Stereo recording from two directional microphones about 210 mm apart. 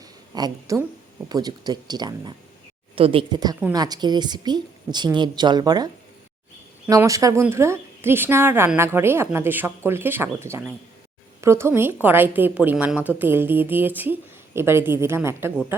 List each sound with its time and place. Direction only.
0.3 s a woman's voice: 15° right (ahead or behind)